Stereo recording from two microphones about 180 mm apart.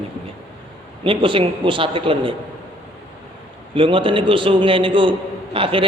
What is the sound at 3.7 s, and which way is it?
A man's voice, 30° right (ahead or behind).